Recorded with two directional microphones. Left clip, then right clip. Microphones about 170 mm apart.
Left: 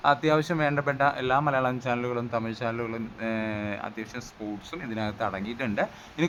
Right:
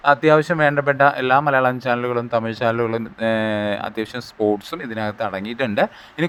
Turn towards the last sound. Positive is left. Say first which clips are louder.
# right 8 dB
turn(degrees=-30)  # may be behind; listen again after turning